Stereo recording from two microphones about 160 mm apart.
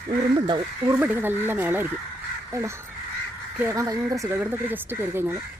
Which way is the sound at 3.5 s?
15° right (ahead or behind).